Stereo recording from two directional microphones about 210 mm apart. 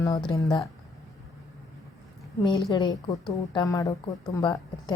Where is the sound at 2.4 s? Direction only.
20° left (ahead or behind).